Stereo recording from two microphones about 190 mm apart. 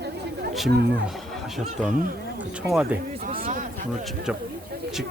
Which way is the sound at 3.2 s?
45° right (ahead or behind).